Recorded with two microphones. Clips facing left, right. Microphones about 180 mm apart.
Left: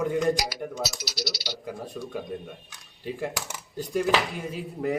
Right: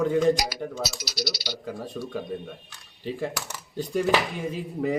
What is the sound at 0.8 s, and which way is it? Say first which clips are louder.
Speech: right 1 dB; 15° right (ahead or behind).